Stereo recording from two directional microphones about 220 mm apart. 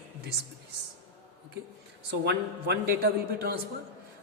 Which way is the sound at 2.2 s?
45° right (ahead or behind).